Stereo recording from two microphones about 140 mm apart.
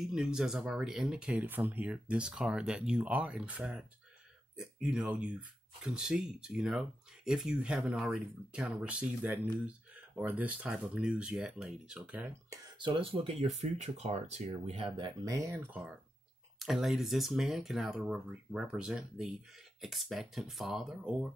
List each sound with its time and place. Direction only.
0.0 s speech: 5° right (ahead or behind)
4.8 s speech: 5° right (ahead or behind)
12.4 s speech: 35° right (ahead or behind); by 21.3 s 5° right (ahead or behind)